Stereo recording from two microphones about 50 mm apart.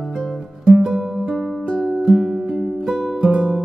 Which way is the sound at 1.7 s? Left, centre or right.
Centre.